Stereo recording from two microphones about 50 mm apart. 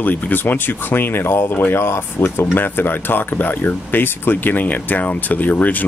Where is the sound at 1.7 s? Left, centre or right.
Left.